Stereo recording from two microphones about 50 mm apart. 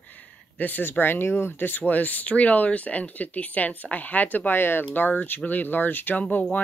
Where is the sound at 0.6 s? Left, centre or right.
Left.